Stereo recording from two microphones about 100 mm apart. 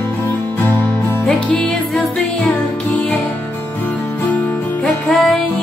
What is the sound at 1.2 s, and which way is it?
Music, 10° left (ahead or behind).